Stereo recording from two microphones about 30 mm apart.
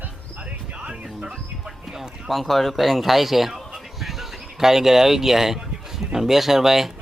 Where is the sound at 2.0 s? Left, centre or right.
Centre.